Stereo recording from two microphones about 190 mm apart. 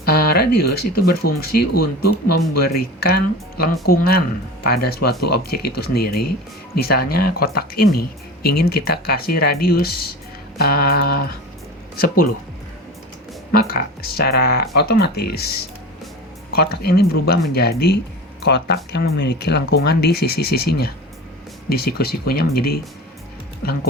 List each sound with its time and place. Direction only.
0.0 s speech: 55° left (ahead or behind)
13.5 s speech: 50° left (ahead or behind)
16.6 s speech: 55° left (ahead or behind)